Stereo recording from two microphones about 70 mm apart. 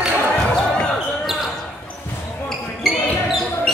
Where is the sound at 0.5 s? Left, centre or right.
Centre.